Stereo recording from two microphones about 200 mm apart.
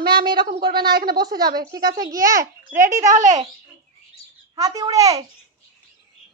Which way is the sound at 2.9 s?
40° right (ahead or behind).